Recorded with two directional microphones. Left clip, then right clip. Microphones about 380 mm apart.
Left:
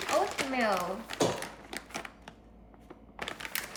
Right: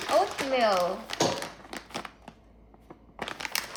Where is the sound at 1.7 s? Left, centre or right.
Centre.